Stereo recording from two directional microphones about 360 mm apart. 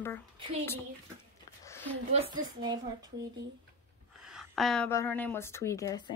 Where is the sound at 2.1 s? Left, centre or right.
Centre.